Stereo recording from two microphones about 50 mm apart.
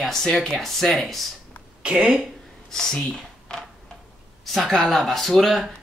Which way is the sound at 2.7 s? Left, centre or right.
Centre.